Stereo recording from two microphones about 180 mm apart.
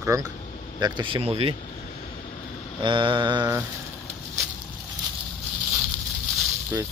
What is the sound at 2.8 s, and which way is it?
Speech, 25° right (ahead or behind).